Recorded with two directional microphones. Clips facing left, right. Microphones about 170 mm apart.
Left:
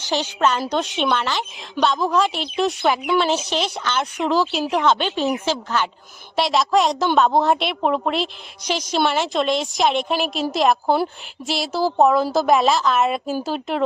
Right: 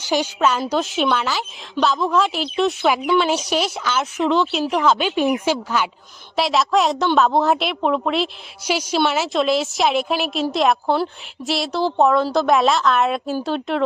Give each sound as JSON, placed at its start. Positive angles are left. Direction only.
{"t": 0.0, "sound": "a woman's voice", "side_deg": -10}